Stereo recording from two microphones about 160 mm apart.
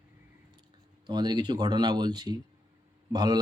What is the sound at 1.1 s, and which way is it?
A man's voice, 25° right (ahead or behind).